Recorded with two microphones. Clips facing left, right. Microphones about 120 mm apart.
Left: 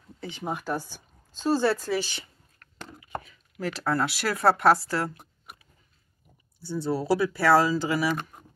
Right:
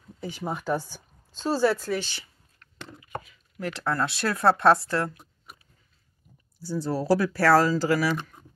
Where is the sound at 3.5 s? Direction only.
65° left (ahead or behind).